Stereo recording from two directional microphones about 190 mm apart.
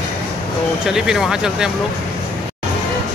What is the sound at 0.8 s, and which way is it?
Speech, 5° right (ahead or behind).